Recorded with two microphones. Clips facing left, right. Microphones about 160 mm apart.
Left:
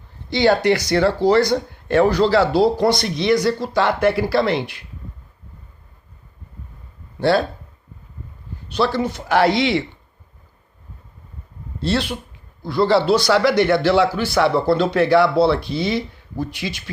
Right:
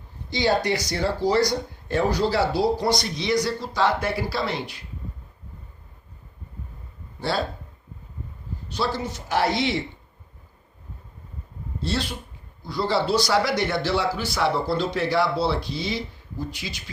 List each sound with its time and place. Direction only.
0.3 s speech: 65° left (ahead or behind)
7.2 s speech: 65° left (ahead or behind)
8.7 s speech: 65° left (ahead or behind)
11.8 s speech: 70° left (ahead or behind)